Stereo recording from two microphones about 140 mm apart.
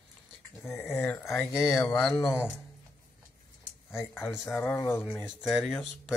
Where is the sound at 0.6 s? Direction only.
15° left (ahead or behind).